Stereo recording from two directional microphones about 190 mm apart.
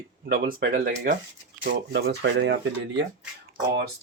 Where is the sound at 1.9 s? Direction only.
65° right (ahead or behind).